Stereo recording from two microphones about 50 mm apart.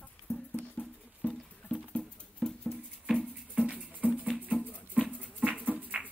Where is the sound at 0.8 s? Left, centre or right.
Left.